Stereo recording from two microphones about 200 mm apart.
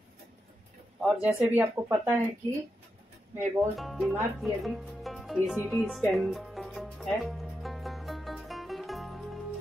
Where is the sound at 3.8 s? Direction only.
Centre (ahead or behind).